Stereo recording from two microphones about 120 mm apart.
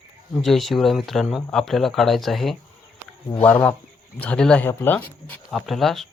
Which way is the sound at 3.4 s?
20° left (ahead or behind).